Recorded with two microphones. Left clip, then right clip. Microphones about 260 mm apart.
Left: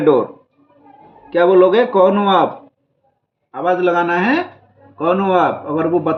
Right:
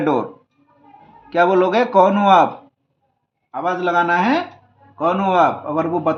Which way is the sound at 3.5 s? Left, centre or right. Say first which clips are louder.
Left 3 dB; centre.